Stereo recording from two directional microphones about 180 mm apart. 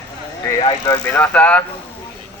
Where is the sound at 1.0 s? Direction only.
10° left (ahead or behind).